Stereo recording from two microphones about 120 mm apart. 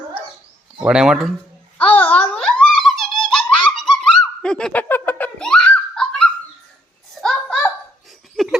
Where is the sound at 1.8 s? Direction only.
10° left (ahead or behind).